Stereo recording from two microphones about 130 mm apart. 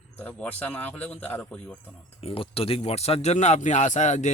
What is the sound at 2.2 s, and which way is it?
Speech, 45° left (ahead or behind).